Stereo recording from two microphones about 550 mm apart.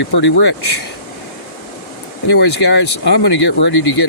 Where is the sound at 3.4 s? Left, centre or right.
Centre.